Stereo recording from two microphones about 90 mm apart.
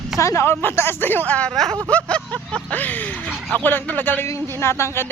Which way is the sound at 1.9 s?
15° left (ahead or behind).